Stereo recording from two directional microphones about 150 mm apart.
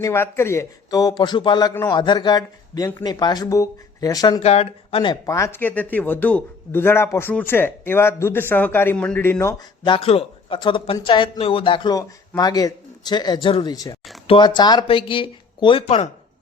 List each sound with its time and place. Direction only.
0.0 s a man's voice: 15° left (ahead or behind)
4.4 s speech: 45° left (ahead or behind)
5.2 s a man's voice: 20° left (ahead or behind)
9.8 s a man's voice: 35° left (ahead or behind)